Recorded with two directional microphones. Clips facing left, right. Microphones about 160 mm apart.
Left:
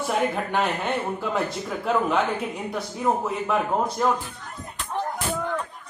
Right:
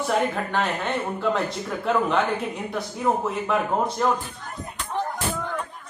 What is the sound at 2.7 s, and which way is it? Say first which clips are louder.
Speech: even; centre (ahead or behind).